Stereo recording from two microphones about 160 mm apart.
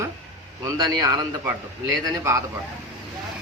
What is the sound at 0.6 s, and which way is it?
Speech, 20° right (ahead or behind).